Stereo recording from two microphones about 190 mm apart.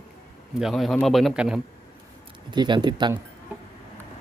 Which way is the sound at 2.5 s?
25° right (ahead or behind).